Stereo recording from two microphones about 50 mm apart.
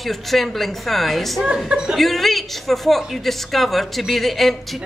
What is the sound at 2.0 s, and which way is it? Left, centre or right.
Speech, centre.